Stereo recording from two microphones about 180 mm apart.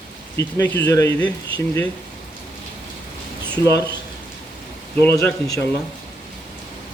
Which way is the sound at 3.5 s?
15° left (ahead or behind).